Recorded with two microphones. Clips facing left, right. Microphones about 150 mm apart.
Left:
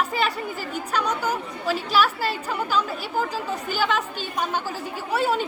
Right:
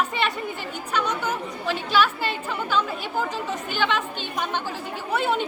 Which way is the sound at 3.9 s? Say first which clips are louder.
Left 1 dB; 40° left (ahead or behind).